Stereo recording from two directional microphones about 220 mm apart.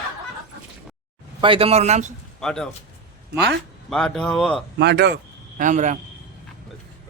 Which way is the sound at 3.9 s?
Centre (ahead or behind).